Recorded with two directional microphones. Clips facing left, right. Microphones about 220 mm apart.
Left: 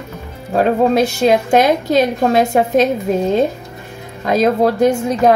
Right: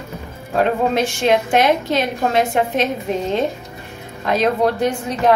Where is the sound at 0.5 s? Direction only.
40° left (ahead or behind).